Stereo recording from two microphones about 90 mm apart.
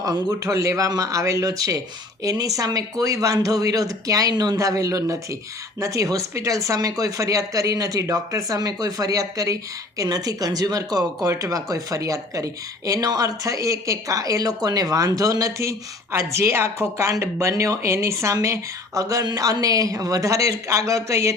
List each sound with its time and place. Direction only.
0.0 s speech: 40° right (ahead or behind)